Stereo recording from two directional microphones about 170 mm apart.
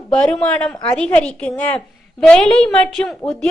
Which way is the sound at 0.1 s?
5° left (ahead or behind).